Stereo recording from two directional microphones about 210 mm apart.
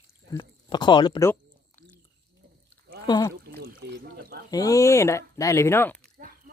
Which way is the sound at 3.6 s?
50° right (ahead or behind).